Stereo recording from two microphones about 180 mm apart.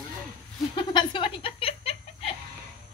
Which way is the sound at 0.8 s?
25° left (ahead or behind).